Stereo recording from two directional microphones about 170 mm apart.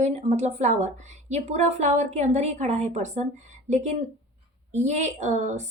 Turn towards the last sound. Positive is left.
turn(degrees=-45)  # may be behind; listen again after turning